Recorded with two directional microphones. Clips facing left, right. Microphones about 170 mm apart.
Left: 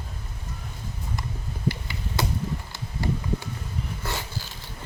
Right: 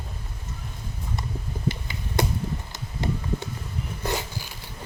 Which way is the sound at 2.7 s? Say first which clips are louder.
Even; 20° right (ahead or behind).